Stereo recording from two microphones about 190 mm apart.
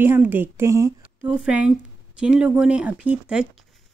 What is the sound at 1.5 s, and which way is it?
Speech, 5° right (ahead or behind).